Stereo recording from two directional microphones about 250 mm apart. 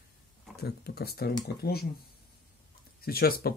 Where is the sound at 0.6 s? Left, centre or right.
Left.